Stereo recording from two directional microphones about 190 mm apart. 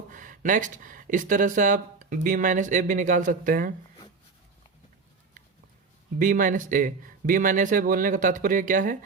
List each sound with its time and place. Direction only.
0.1 s speech: 45° right (ahead or behind)
6.1 s speech: 45° right (ahead or behind)